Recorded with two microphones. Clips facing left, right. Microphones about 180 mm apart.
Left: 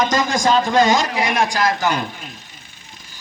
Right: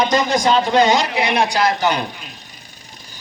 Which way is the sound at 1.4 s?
20° right (ahead or behind).